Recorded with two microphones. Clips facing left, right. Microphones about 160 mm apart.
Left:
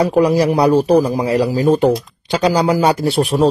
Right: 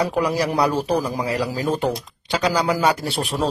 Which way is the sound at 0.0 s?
25° left (ahead or behind).